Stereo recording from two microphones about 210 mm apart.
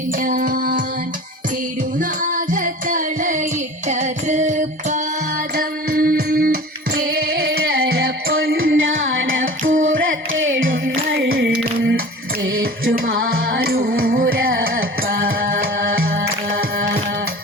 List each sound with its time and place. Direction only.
0.2 s music: 40° right (ahead or behind)
2.0 s music: 40° right (ahead or behind)
8.3 s music: 70° right (ahead or behind)
11.2 s a sound: 50° right (ahead or behind)
12.5 s music: 70° right (ahead or behind)
13.1 s music: 45° right (ahead or behind)